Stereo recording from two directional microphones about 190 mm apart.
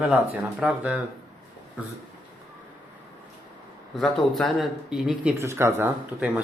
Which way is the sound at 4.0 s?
Centre (ahead or behind).